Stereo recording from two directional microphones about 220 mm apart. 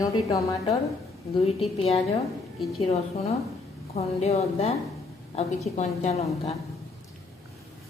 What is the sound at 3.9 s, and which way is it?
A woman's voice, 30° left (ahead or behind).